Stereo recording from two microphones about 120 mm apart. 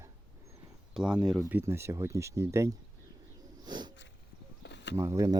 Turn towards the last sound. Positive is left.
turn(degrees=-25)  # may be behind; listen again after turning